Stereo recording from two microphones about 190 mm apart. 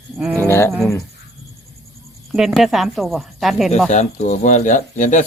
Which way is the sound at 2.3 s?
Centre (ahead or behind).